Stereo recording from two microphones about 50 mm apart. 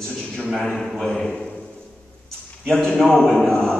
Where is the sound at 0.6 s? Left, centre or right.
Centre.